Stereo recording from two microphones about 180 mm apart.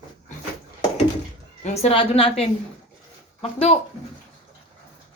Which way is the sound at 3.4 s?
35° left (ahead or behind).